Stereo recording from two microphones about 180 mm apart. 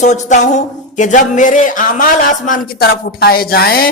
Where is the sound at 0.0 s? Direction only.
40° left (ahead or behind).